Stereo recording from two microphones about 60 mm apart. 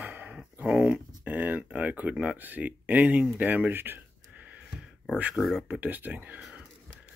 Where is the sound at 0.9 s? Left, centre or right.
Right.